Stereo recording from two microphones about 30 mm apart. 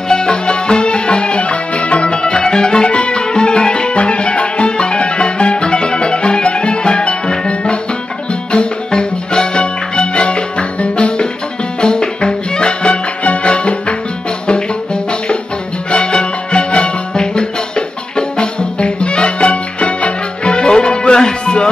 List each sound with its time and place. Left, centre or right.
0.1 s music: left
2.4 s music: left
3.9 s music: left
12.8 s music: left
15.9 s music: left